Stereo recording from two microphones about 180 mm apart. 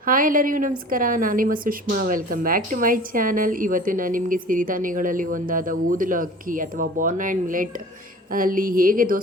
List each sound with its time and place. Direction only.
0.0 s a woman's voice: 50° right (ahead or behind)